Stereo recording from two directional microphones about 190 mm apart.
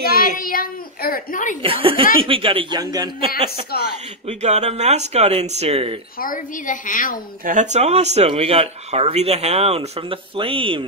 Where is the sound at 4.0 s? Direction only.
35° right (ahead or behind).